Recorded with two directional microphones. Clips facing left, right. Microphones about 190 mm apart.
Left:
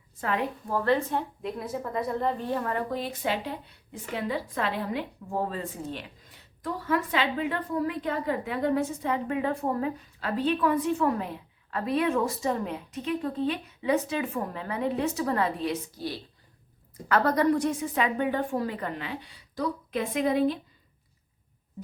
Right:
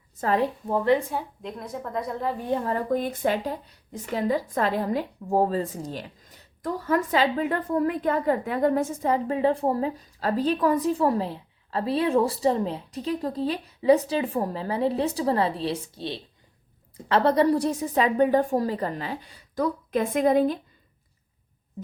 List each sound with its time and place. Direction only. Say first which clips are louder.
0.2 s a woman's voice: right 5 dB; 35° right (ahead or behind)
0.7 s a woman's voice: right 3 dB; 15° right (ahead or behind)
1.1 s a woman's voice: left 1 dB; 5° left (ahead or behind)
2.4 s a woman's voice: right 3 dB; 20° right (ahead or behind)
2.9 s a woman's voice: right 5 dB; 50° right (ahead or behind)